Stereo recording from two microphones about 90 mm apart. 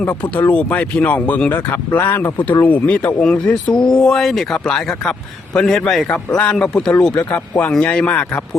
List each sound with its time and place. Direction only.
0.0 s a man's voice: 20° left (ahead or behind)